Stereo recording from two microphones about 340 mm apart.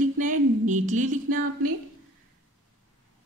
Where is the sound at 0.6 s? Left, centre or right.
Right.